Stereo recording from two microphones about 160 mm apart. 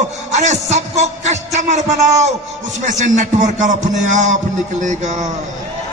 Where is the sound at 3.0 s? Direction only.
50° right (ahead or behind).